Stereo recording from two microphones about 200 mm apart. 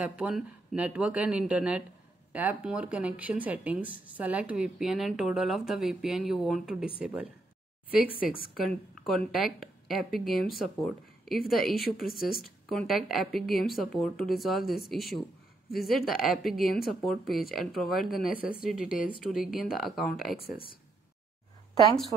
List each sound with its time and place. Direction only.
0.0 s speech: 5° right (ahead or behind)
7.9 s speech: 45° left (ahead or behind)
9.0 s speech: centre (ahead or behind)